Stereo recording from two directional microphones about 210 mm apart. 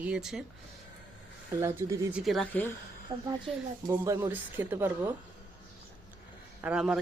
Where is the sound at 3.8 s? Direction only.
10° right (ahead or behind).